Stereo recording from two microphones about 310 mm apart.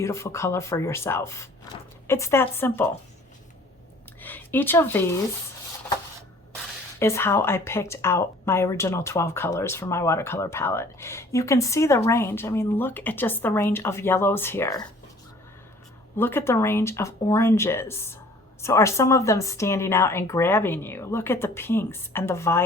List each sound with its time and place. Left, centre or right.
0.0 s speech: centre
4.2 s speech: centre
7.0 s speech: centre
16.1 s speech: centre